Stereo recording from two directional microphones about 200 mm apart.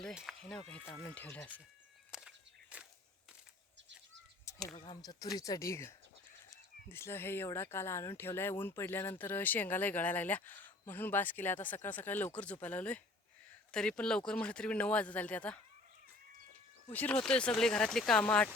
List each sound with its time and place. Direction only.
0.0 s speech: 5° right (ahead or behind)
0.5 s speech: 10° left (ahead or behind)
2.1 s walk: 5° right (ahead or behind)
4.9 s speech: 20° left (ahead or behind)
16.9 s speech: 10° left (ahead or behind)